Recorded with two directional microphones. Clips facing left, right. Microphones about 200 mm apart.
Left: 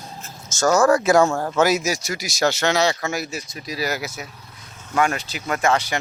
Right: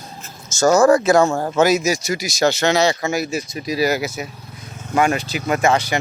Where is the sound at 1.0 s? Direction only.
10° left (ahead or behind).